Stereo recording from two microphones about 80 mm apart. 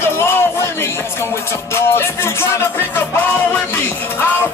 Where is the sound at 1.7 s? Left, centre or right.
Left.